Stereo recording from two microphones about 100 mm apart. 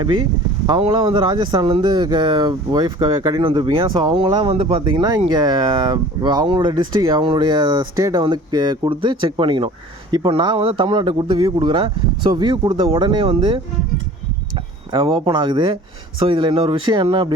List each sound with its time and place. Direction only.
0.8 s speech: 65° right (ahead or behind); by 3.4 s 40° right (ahead or behind)
3.4 s speech: 55° right (ahead or behind)
4.5 s speech: 60° right (ahead or behind); by 8.2 s 35° right (ahead or behind)
8.2 s speech: 50° right (ahead or behind)
14.9 s speech: 65° right (ahead or behind)